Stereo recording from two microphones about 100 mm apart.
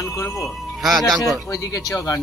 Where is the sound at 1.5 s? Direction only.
35° left (ahead or behind).